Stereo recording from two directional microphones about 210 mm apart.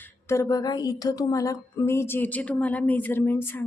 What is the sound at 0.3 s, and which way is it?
A woman's voice, 15° left (ahead or behind).